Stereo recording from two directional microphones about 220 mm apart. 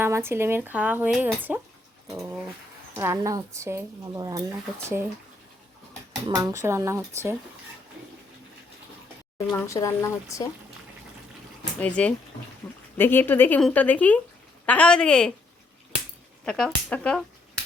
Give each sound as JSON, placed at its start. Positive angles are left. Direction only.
{"t": 0.0, "sound": "speech", "side_deg": -10}
{"t": 2.9, "sound": "speech", "side_deg": -10}
{"t": 6.2, "sound": "speech", "side_deg": -15}
{"t": 9.5, "sound": "speech", "side_deg": 15}
{"t": 11.8, "sound": "speech", "side_deg": 5}
{"t": 16.5, "sound": "speech", "side_deg": 5}